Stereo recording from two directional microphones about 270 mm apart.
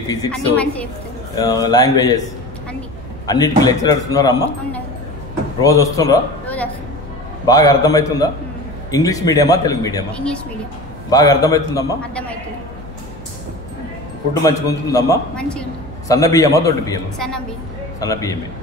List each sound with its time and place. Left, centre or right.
0.3 s a woman's voice: centre
3.3 s a man's voice: centre
14.4 s a man's voice: centre
18.0 s a man's voice: centre